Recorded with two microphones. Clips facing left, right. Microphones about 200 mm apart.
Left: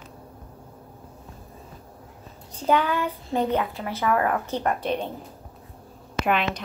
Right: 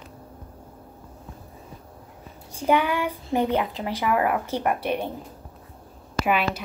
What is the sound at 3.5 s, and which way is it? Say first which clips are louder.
Speech: right 1 dB; 15° right (ahead or behind).